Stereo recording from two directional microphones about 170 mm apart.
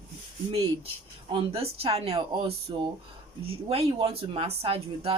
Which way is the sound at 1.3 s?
35° right (ahead or behind).